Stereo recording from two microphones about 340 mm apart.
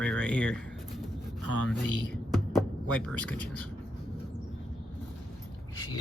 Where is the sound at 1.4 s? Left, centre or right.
Left.